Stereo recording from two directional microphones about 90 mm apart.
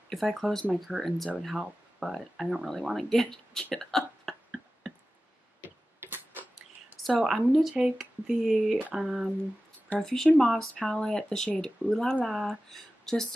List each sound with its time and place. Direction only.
0.1 s speech: centre (ahead or behind)
3.7 s hiccup: 5° left (ahead or behind)
5.9 s a sound: 25° right (ahead or behind)
7.0 s speech: centre (ahead or behind)